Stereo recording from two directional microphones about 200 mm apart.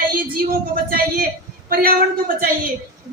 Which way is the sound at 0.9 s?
50° right (ahead or behind).